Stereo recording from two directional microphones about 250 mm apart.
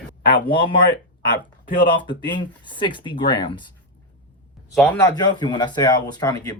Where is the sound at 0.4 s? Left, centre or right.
Centre.